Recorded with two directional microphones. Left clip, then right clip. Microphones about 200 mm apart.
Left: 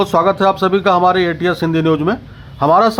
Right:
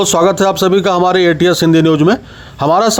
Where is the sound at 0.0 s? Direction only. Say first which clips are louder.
Right 2 dB; 35° right (ahead or behind).